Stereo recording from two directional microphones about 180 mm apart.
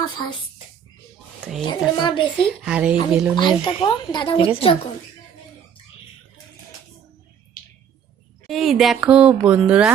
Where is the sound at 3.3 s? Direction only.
25° left (ahead or behind).